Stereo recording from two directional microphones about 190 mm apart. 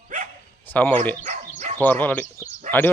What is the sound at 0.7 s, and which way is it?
Speech, 10° left (ahead or behind).